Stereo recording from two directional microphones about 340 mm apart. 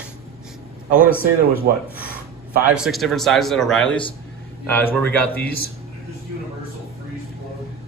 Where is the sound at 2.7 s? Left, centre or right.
Centre.